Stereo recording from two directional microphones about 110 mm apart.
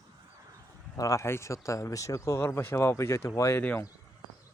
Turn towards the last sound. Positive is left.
turn(degrees=25)  # may be behind; listen again after turning